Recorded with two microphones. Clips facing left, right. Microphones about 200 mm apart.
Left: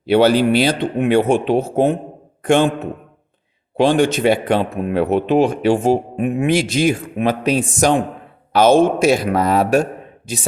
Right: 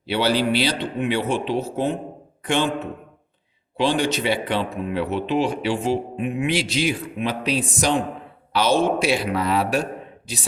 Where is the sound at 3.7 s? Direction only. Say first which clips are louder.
Left 7 dB; 50° left (ahead or behind).